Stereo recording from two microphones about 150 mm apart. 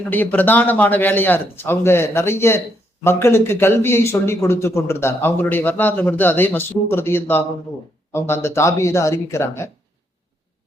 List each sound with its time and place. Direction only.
0.1 s speech: 10° left (ahead or behind)